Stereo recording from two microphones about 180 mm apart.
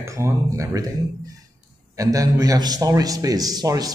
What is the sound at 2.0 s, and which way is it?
Speech, 20° right (ahead or behind).